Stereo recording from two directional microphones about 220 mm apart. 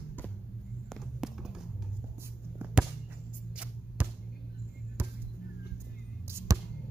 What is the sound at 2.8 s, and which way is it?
Music, 5° right (ahead or behind).